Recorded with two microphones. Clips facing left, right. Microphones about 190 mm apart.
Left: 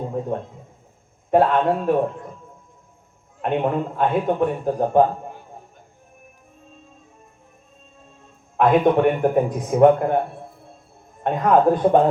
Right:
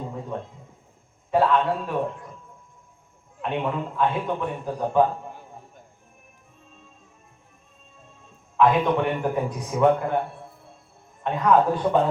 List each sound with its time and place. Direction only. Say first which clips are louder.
0.1 s a man's voice: left 7 dB; 50° left (ahead or behind)
3.4 s a man's voice: left 5 dB; 55° left (ahead or behind)
8.5 s a man's voice: left 4 dB; 55° left (ahead or behind)
11.2 s a man's voice: left 3 dB; 50° left (ahead or behind)